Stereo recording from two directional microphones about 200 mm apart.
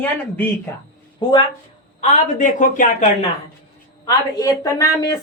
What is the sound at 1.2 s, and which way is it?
Speech, 25° left (ahead or behind).